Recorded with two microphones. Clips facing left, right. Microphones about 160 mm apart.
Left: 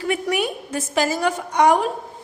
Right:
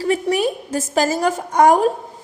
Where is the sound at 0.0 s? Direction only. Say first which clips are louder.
Right 4 dB; 35° right (ahead or behind).